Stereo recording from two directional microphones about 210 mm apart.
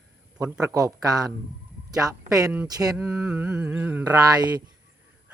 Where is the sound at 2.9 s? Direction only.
5° right (ahead or behind).